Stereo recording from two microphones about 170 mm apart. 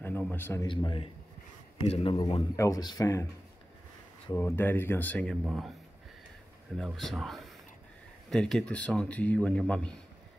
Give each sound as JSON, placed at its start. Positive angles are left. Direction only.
{"t": 0.0, "sound": "a man's voice", "side_deg": 10}
{"t": 0.7, "sound": "a man's voice", "side_deg": 30}
{"t": 4.3, "sound": "a man's voice", "side_deg": 15}
{"t": 6.8, "sound": "a man's voice", "side_deg": 0}